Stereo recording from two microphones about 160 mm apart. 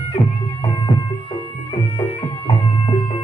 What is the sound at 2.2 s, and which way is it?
Music, 35° left (ahead or behind).